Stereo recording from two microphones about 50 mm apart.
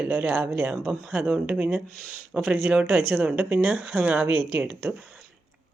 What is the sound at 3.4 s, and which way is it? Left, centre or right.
Speech, centre.